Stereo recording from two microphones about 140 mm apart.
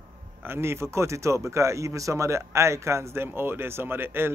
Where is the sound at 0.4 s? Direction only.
15° right (ahead or behind).